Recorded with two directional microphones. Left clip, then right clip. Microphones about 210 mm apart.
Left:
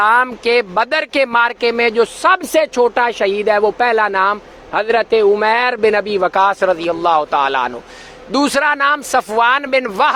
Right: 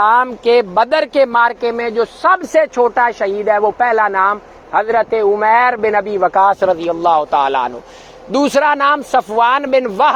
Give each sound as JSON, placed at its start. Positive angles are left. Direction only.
{"t": 0.0, "sound": "a man's voice", "side_deg": 0}
{"t": 1.6, "sound": "speech", "side_deg": 15}
{"t": 2.5, "sound": "speech", "side_deg": 30}
{"t": 2.8, "sound": "speech", "side_deg": 20}
{"t": 6.4, "sound": "a man's voice", "side_deg": 5}